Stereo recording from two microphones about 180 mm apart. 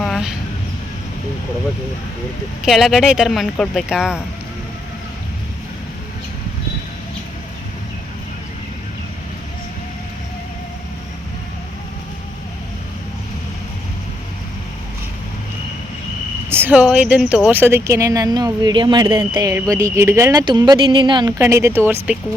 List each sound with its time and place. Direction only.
0.0 s a sound: centre (ahead or behind)
2.6 s speech: centre (ahead or behind)
16.5 s speech: 10° right (ahead or behind)